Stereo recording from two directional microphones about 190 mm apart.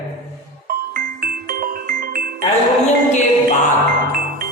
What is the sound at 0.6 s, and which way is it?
Music, 50° right (ahead or behind).